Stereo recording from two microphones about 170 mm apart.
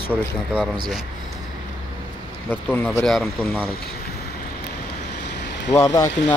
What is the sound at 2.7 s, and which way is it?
Speech, 10° left (ahead or behind).